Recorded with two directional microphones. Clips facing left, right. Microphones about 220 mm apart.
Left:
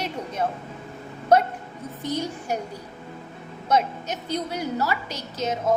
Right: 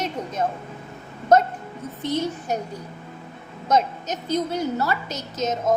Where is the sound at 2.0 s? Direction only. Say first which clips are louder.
Right 3 dB; 10° left (ahead or behind).